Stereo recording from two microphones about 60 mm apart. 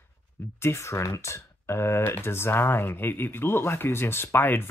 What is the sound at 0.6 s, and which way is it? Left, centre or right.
Speech, left.